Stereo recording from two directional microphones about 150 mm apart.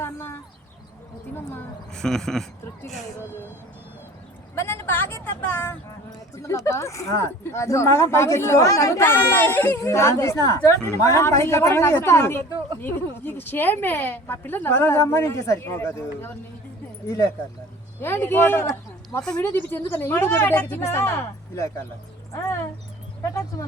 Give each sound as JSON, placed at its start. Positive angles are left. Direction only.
{"t": 0.0, "sound": "a sound", "side_deg": 15}
{"t": 1.9, "sound": "speech", "side_deg": 5}
{"t": 4.5, "sound": "a woman's voice", "side_deg": 15}
{"t": 18.0, "sound": "a man's voice", "side_deg": 15}